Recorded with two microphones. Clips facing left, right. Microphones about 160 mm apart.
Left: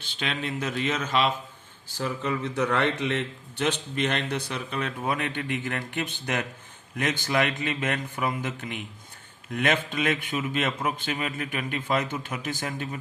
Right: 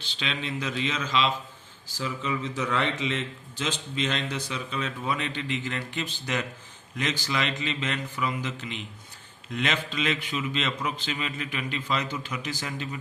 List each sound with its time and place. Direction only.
0.0 s a man's voice: 50° left (ahead or behind)